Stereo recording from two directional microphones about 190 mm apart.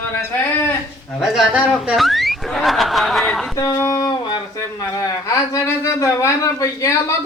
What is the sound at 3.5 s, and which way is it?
Speech, 15° left (ahead or behind).